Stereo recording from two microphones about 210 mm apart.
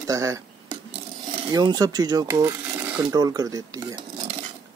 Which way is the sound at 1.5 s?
20° right (ahead or behind).